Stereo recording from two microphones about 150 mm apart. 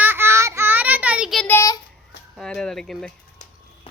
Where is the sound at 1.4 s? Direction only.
10° left (ahead or behind).